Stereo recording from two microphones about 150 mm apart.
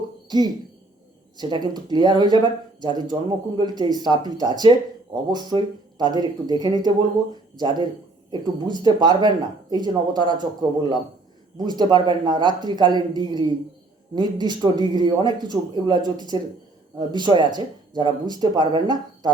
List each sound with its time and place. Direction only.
0.3 s speech: 30° right (ahead or behind)